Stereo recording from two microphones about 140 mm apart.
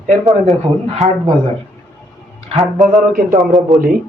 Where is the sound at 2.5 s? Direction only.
Centre (ahead or behind).